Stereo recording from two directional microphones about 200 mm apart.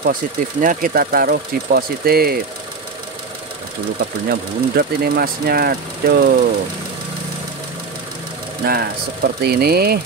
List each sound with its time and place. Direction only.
0.0 s speech: 45° right (ahead or behind)
4.3 s speech: 50° right (ahead or behind)
8.6 s speech: 50° right (ahead or behind)